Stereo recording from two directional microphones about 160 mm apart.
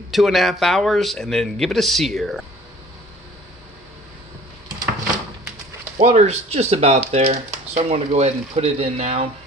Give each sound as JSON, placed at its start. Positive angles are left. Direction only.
{"t": 0.1, "sound": "speech", "side_deg": 0}
{"t": 6.0, "sound": "speech", "side_deg": -45}